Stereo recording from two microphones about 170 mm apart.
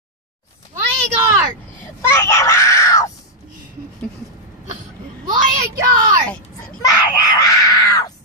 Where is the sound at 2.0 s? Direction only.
15° left (ahead or behind).